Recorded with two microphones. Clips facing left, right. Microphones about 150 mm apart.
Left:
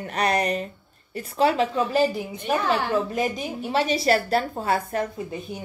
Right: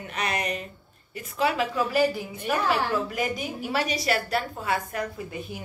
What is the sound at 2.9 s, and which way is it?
A woman's voice, 25° left (ahead or behind).